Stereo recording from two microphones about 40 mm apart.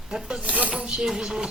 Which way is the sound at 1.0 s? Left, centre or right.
Centre.